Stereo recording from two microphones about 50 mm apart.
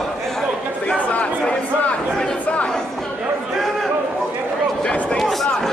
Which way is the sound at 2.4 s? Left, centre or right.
Left.